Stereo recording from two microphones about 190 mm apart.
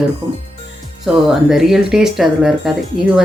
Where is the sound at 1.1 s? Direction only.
5° right (ahead or behind).